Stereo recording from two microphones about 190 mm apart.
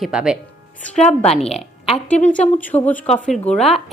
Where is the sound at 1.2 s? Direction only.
30° left (ahead or behind).